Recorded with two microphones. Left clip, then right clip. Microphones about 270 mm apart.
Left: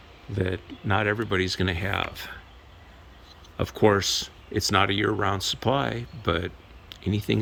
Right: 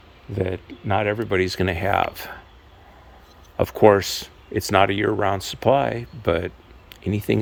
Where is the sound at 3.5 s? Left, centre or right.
Centre.